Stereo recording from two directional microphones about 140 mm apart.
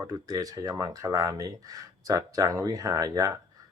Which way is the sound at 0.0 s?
25° right (ahead or behind).